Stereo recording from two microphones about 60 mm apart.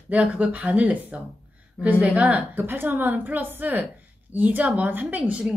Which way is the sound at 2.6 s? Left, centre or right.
Right.